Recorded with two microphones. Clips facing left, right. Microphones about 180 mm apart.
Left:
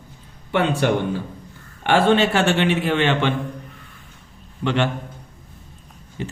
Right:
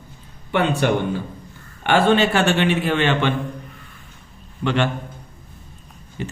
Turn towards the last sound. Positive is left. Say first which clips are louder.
# even
turn(degrees=30)  # may be behind; listen again after turning